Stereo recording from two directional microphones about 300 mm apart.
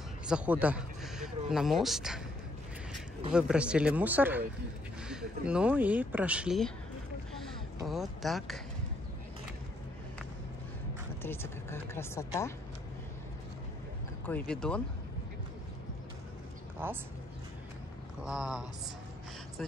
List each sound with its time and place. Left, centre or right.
0.3 s speech: centre
3.3 s speech: centre
11.2 s speech: centre
14.2 s speech: centre
16.8 s speech: centre
18.2 s speech: centre